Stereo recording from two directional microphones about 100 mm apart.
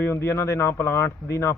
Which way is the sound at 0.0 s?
25° left (ahead or behind).